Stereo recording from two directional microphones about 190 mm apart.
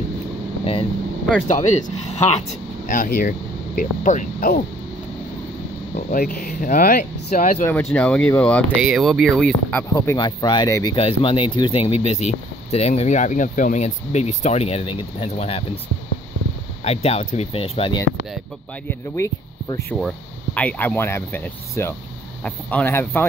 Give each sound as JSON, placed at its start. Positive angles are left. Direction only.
{"t": 1.5, "sound": "speech", "side_deg": 40}
{"t": 2.9, "sound": "speech", "side_deg": 50}
{"t": 5.9, "sound": "speech", "side_deg": 50}
{"t": 7.6, "sound": "speech", "side_deg": 10}
{"t": 9.9, "sound": "speech", "side_deg": 20}
{"t": 16.8, "sound": "speech", "side_deg": 35}
{"t": 18.9, "sound": "speech", "side_deg": 15}